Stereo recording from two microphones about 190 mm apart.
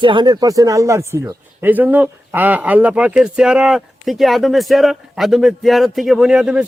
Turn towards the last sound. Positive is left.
turn(degrees=-5)  # may be behind; listen again after turning